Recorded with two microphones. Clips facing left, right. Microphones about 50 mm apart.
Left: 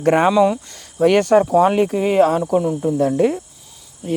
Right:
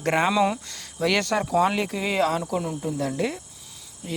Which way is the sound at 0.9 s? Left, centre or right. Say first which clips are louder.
Left 9 dB; left.